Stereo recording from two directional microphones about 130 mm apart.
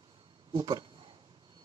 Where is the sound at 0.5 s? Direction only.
40° right (ahead or behind).